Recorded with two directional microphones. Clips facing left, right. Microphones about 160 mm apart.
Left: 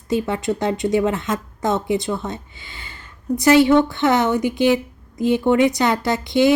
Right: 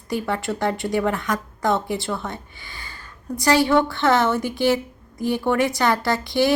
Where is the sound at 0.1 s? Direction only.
20° left (ahead or behind).